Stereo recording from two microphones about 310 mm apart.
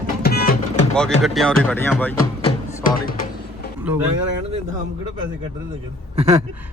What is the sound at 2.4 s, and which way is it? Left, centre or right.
Music, left.